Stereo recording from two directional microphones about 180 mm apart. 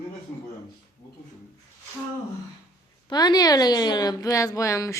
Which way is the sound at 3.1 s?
20° left (ahead or behind).